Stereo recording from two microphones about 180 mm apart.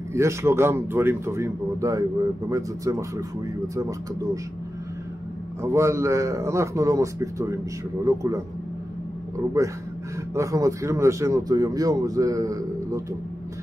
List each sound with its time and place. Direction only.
0.1 s a man's voice: 15° right (ahead or behind)
5.6 s a man's voice: 15° right (ahead or behind)
9.6 s a man's voice: 15° right (ahead or behind)